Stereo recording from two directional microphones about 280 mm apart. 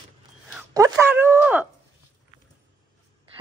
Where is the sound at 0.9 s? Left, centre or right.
Centre.